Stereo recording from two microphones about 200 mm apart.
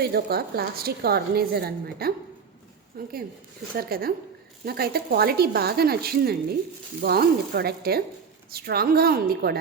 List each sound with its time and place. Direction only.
0.0 s a woman's voice: 50° right (ahead or behind)